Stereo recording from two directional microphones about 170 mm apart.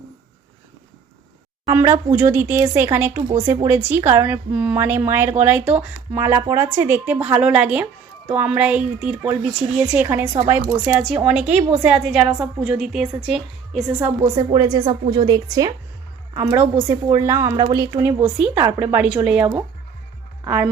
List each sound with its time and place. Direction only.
1.6 s a woman's voice: 20° right (ahead or behind)
14.3 s speech: 20° right (ahead or behind)